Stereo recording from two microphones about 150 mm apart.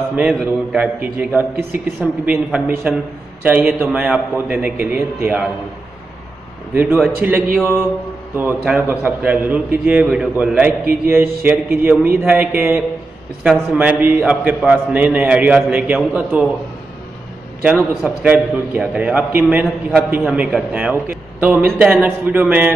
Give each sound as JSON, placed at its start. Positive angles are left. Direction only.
{"t": 0.3, "sound": "a man's voice", "side_deg": -5}
{"t": 6.7, "sound": "a man's voice", "side_deg": -10}
{"t": 17.6, "sound": "a man's voice", "side_deg": -10}